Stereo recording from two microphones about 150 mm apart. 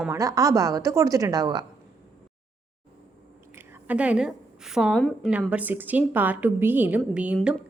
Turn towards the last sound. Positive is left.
turn(degrees=-10)  # may be behind; listen again after turning